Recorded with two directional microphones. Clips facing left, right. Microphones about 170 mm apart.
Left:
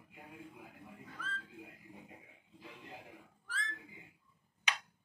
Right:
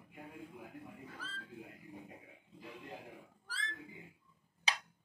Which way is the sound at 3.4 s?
35° right (ahead or behind).